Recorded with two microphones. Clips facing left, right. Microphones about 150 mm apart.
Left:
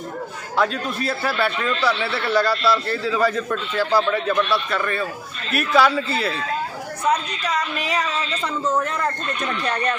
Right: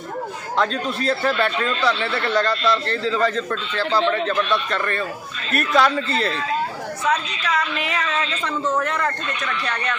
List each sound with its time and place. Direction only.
0.5 s a man's voice: 10° left (ahead or behind)
8.7 s speech: 20° left (ahead or behind)